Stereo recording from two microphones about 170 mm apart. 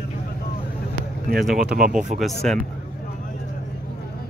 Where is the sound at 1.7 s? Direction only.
60° right (ahead or behind).